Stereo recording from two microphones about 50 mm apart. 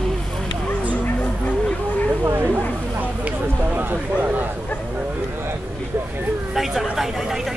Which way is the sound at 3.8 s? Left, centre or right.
Right.